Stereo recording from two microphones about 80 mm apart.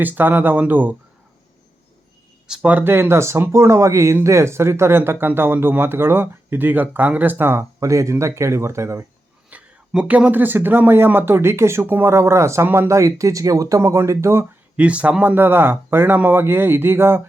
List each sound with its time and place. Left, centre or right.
0.0 s speech: right
2.5 s speech: centre; by 9.0 s right
9.5 s speech: centre; by 12.6 s right
12.6 s speech: right
12.9 s speech: right
14.8 s speech: centre; by 17.2 s right